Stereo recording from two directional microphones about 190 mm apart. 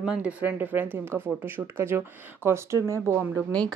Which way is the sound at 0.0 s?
5° right (ahead or behind).